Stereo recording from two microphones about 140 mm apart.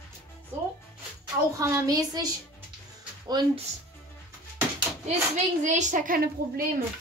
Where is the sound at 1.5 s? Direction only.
25° right (ahead or behind).